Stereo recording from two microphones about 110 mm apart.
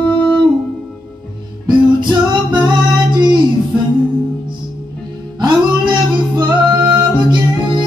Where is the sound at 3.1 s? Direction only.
45° right (ahead or behind).